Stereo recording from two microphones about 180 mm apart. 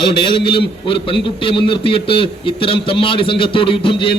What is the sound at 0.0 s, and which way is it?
A man's voice, 25° left (ahead or behind).